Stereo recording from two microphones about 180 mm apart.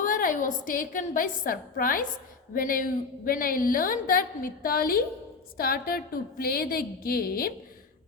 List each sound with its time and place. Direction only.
0.0 s a woman's voice: 50° left (ahead or behind)